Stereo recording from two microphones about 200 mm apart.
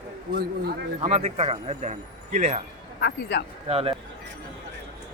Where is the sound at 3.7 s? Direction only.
30° right (ahead or behind).